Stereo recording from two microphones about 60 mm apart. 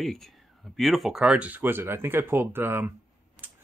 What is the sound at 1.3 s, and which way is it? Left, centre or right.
Speech, right.